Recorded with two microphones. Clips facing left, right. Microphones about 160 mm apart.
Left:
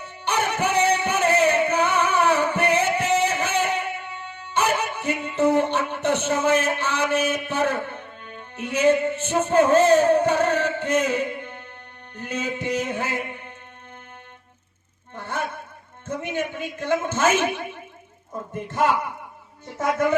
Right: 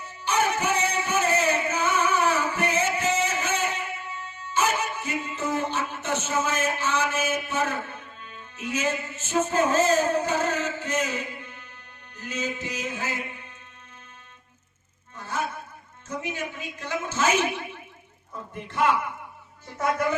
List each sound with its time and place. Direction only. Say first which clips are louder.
0.3 s music: left 1 dB; 65° left (ahead or behind)
15.1 s a sound: left 2 dB; 60° left (ahead or behind)
16.0 s a man's voice: left 5 dB; 55° left (ahead or behind)